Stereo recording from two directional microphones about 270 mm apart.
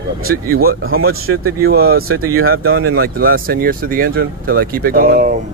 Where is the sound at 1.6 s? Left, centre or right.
Right.